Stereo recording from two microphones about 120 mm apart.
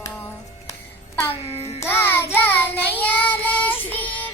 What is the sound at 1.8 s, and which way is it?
Child singing, 20° left (ahead or behind).